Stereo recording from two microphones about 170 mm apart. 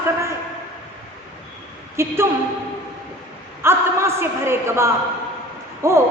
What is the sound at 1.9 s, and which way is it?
Speech, 15° right (ahead or behind).